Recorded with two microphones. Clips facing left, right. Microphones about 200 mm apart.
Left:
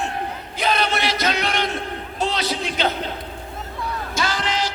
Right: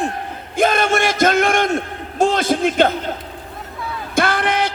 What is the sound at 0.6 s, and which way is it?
A man's voice, 50° right (ahead or behind).